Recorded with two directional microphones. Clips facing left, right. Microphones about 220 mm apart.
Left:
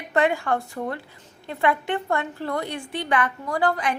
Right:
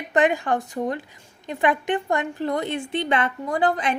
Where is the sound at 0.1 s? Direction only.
20° right (ahead or behind).